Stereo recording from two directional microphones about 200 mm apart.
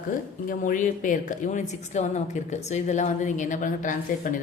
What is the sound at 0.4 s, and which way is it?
Speech, 45° left (ahead or behind).